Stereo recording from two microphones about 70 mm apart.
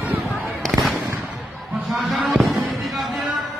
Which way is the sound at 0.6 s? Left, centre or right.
Centre.